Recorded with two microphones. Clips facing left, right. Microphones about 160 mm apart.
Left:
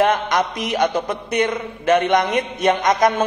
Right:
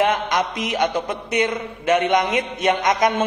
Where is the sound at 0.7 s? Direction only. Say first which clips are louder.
Left 2 dB; 40° left (ahead or behind).